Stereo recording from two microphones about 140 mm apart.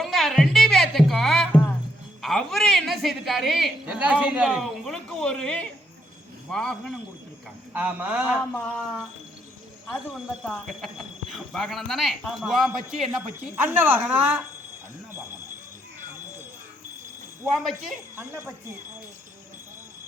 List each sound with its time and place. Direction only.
0.0 s music: centre (ahead or behind)
2.2 s a sound: centre (ahead or behind)
3.8 s speech: 10° right (ahead or behind)
7.7 s speech: 10° right (ahead or behind)
8.5 s speech: 10° left (ahead or behind)
13.6 s speech: 15° right (ahead or behind)
17.5 s speech: centre (ahead or behind)
18.2 s speech: 15° right (ahead or behind)